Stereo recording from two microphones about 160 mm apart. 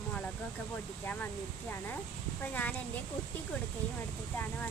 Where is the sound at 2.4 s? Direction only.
10° left (ahead or behind).